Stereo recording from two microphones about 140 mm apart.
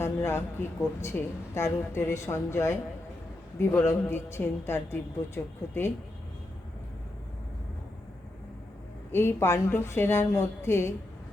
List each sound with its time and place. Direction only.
0.0 s a woman's voice: 15° left (ahead or behind)
9.1 s a woman's voice: 15° left (ahead or behind)